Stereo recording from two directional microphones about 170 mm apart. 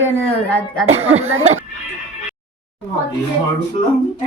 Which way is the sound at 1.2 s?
40° right (ahead or behind).